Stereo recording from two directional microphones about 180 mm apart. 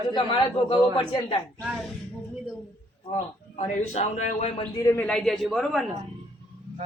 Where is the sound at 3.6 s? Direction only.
40° left (ahead or behind).